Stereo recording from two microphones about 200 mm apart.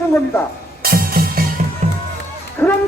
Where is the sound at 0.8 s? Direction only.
45° right (ahead or behind).